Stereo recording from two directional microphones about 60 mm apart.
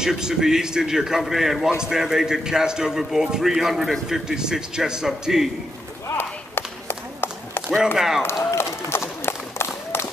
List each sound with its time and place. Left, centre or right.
0.0 s a man's voice: centre
6.0 s run: left
7.8 s a man's voice: centre
8.5 s run: left